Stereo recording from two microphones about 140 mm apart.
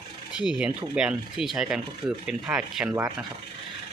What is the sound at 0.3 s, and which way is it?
Speech, 10° right (ahead or behind).